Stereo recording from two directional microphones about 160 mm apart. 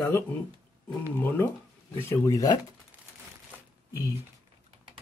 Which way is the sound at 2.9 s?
10° right (ahead or behind).